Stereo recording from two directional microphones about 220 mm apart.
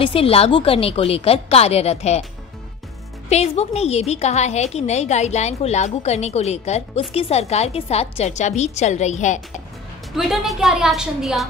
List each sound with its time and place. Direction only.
0.0 s a woman's voice: 25° left (ahead or behind)
3.3 s a woman's voice: 30° left (ahead or behind)
10.1 s a woman's voice: centre (ahead or behind)